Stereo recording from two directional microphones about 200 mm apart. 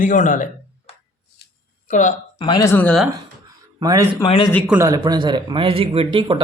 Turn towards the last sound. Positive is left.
turn(degrees=-25)  # may be behind; listen again after turning